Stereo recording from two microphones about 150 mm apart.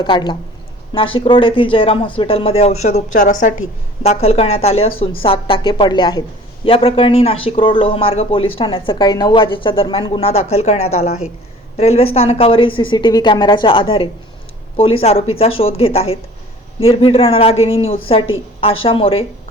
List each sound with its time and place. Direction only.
0.0 s speech: 30° left (ahead or behind); by 3.7 s 55° left (ahead or behind)
4.2 s speech: 45° left (ahead or behind)